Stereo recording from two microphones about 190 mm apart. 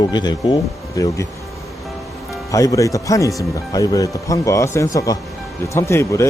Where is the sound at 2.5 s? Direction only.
15° left (ahead or behind).